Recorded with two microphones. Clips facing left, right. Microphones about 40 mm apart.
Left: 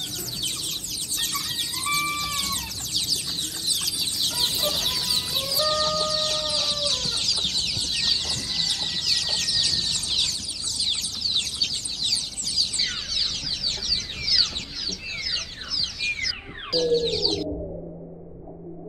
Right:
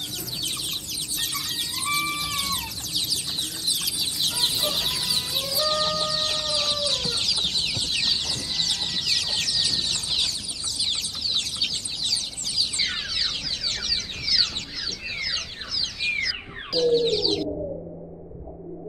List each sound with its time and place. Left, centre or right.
0.5 s chicken: centre
1.8 s music: centre
3.3 s chicken: centre
5.0 s chicken: centre
5.7 s music: centre
6.4 s chicken: centre
9.6 s a sound: centre
12.4 s a sound: centre
13.9 s chicken: centre
16.0 s a sound: right
16.9 s bird: centre